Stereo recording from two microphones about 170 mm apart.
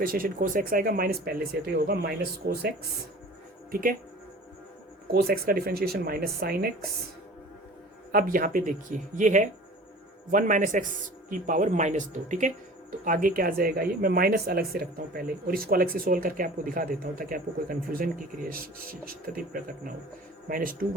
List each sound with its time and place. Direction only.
0.0 s speech: 55° right (ahead or behind)
3.7 s speech: 55° right (ahead or behind)
5.1 s speech: 65° right (ahead or behind)
8.1 s speech: 55° right (ahead or behind)